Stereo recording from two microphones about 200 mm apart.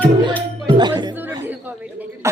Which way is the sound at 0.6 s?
25° right (ahead or behind).